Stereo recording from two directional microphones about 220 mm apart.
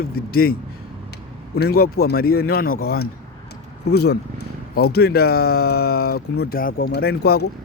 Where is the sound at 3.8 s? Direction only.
50° left (ahead or behind).